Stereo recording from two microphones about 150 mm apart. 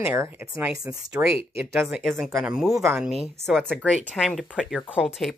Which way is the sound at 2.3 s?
5° right (ahead or behind).